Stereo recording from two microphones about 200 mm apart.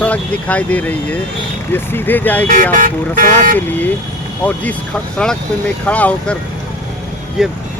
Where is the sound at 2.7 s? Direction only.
45° right (ahead or behind).